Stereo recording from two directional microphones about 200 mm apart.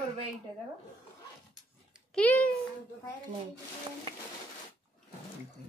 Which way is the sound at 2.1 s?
5° left (ahead or behind).